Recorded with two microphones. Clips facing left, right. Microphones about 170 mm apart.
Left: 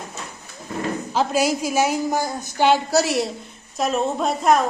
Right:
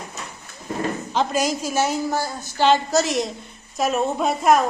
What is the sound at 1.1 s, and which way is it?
A woman's voice, 5° left (ahead or behind).